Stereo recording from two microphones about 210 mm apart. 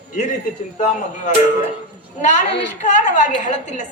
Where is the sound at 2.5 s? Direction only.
55° left (ahead or behind).